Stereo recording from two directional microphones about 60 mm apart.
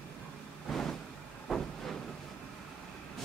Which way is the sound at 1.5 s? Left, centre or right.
Centre.